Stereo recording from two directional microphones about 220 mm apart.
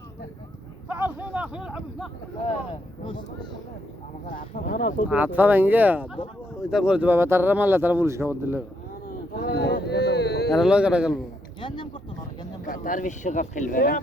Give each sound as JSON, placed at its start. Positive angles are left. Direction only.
{"t": 0.9, "sound": "a sound", "side_deg": -10}
{"t": 1.3, "sound": "speech", "side_deg": -5}
{"t": 3.0, "sound": "speech", "side_deg": 25}
{"t": 4.3, "sound": "speech", "side_deg": 40}
{"t": 5.0, "sound": "speech", "side_deg": -5}
{"t": 9.0, "sound": "a sound", "side_deg": 45}
{"t": 10.5, "sound": "speech", "side_deg": -5}
{"t": 12.6, "sound": "speech", "side_deg": 40}